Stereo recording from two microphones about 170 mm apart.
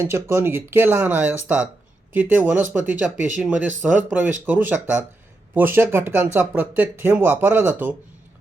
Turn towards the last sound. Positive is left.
turn(degrees=-10)  # may be behind; listen again after turning